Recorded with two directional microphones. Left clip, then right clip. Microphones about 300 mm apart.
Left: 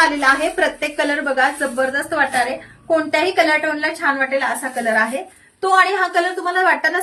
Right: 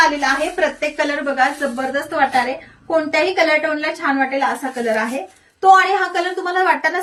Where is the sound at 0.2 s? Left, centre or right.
Centre.